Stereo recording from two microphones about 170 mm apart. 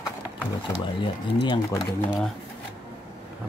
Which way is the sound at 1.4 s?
20° left (ahead or behind).